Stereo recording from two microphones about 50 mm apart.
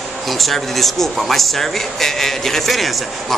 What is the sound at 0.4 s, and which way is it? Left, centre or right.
A man's voice, centre.